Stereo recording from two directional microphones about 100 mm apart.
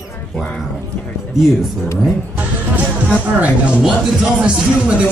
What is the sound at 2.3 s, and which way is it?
Music, 15° right (ahead or behind).